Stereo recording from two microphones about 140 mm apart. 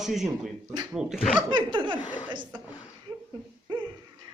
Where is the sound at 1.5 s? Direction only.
35° right (ahead or behind).